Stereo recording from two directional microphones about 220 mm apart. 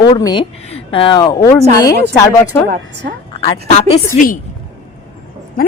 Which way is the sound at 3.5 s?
30° left (ahead or behind).